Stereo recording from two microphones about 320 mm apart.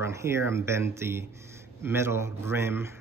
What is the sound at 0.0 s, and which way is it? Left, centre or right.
Speech, centre.